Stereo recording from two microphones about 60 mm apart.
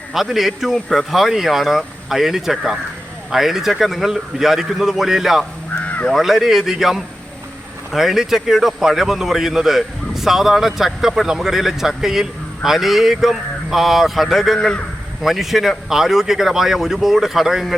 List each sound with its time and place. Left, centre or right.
0.1 s a man's voice: centre
5.8 s caw: left
6.1 s a man's voice: centre